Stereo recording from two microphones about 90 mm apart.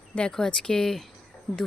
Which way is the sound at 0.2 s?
10° left (ahead or behind).